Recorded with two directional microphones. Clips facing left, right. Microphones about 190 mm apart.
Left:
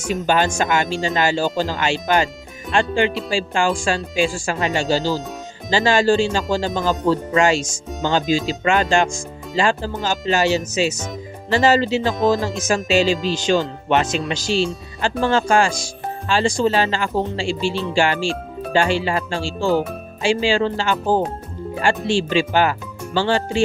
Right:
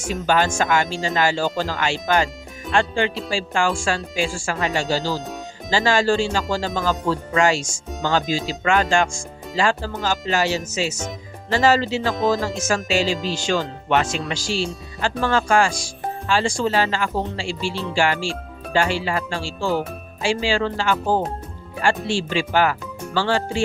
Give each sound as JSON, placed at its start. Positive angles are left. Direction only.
{"t": 0.1, "sound": "speech", "side_deg": 20}